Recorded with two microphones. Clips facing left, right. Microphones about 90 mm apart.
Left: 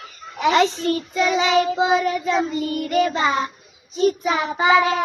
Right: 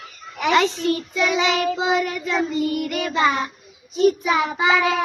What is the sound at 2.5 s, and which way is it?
Child singing, 35° left (ahead or behind).